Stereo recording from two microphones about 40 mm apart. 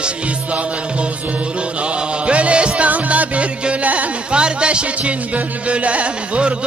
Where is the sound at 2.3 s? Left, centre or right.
Right.